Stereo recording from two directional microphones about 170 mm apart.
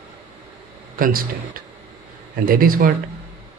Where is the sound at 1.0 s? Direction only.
60° right (ahead or behind).